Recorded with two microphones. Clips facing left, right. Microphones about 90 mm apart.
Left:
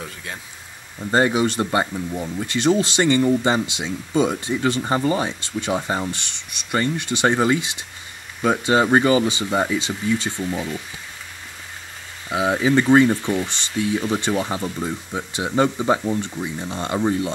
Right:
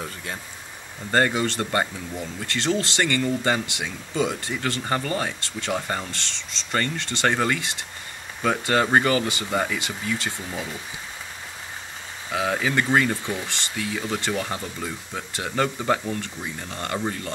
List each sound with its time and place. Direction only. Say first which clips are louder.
0.0 s speech: even; centre (ahead or behind)
1.1 s speech: left 3 dB; 15° left (ahead or behind)
12.3 s speech: left 5 dB; 10° left (ahead or behind)